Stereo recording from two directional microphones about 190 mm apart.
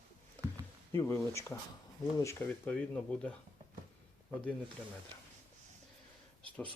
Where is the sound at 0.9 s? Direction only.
15° left (ahead or behind).